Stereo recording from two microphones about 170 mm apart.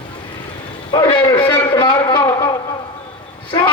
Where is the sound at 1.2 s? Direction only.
25° left (ahead or behind).